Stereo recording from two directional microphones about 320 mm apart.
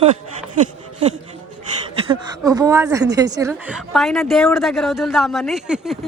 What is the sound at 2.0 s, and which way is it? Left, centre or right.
A woman's voice, centre.